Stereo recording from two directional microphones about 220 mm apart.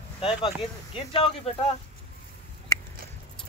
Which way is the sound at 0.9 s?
25° left (ahead or behind).